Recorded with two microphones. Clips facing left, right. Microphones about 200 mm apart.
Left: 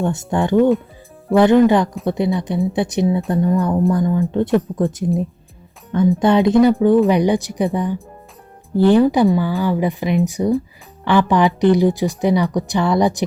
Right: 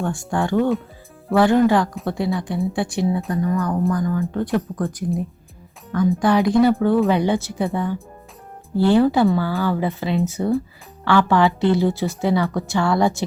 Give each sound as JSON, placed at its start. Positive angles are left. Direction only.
{"t": 0.0, "sound": "speech", "side_deg": 20}